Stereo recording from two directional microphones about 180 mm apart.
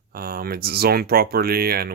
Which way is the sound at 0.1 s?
55° right (ahead or behind).